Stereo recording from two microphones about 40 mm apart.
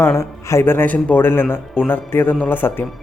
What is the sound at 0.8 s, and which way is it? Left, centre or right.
Speech, left.